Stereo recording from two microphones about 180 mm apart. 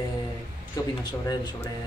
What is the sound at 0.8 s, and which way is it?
Speech, 20° left (ahead or behind).